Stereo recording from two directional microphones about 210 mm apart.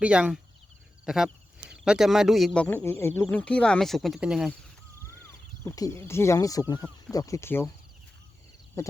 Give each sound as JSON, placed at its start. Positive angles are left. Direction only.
{"t": 0.0, "sound": "speech", "side_deg": -5}
{"t": 5.6, "sound": "speech", "side_deg": 15}
{"t": 8.8, "sound": "a sound", "side_deg": 15}